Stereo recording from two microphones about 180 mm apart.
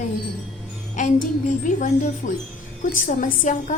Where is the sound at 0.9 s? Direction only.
45° left (ahead or behind).